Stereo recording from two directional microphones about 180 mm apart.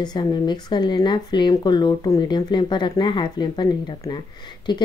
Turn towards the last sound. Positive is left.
turn(degrees=25)  # may be behind; listen again after turning